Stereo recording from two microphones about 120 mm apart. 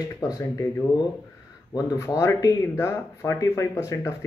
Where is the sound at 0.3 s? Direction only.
25° left (ahead or behind).